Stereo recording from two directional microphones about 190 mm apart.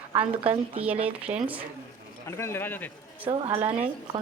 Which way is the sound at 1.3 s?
35° right (ahead or behind).